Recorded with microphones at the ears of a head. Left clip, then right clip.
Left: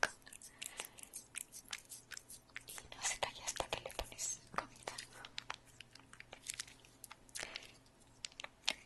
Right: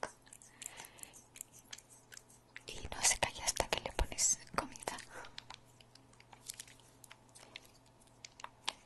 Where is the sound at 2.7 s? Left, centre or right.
Right.